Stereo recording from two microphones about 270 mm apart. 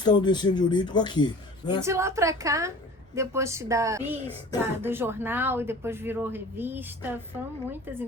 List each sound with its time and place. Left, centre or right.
0.0 s speech: centre
1.8 s speech: centre